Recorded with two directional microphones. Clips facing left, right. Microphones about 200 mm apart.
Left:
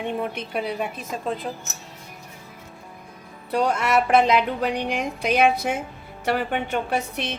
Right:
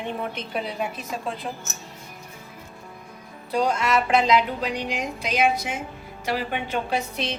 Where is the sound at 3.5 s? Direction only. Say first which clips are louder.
Left 1 dB; 60° left (ahead or behind).